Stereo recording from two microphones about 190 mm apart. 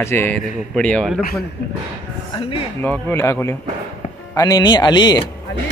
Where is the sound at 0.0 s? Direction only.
10° left (ahead or behind).